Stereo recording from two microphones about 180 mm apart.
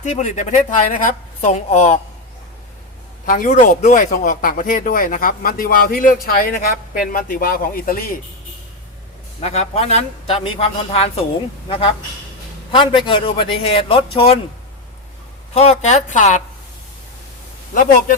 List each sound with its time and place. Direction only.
0.0 s speech: 40° left (ahead or behind)
3.2 s speech: 50° left (ahead or behind)
9.4 s speech: 35° left (ahead or behind)
12.7 s a man's voice: 30° left (ahead or behind)
15.5 s speech: 35° left (ahead or behind)